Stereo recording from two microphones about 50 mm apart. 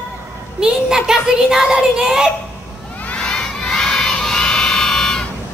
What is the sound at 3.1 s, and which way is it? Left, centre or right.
Crowd, centre.